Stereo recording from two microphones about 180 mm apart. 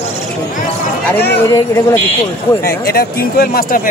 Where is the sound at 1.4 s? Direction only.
15° left (ahead or behind).